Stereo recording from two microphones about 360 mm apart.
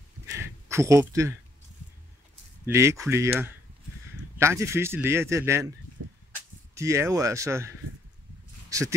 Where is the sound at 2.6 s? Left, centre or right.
Centre.